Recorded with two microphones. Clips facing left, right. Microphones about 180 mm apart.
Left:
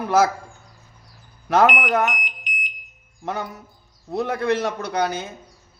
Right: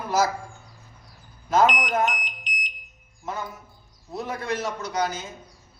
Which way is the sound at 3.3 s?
70° left (ahead or behind).